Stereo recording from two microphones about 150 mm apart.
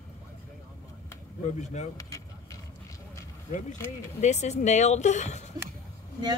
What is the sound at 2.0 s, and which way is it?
Vehicle, 20° left (ahead or behind).